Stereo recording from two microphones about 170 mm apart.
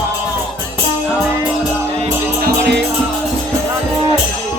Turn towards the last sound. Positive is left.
turn(degrees=-80)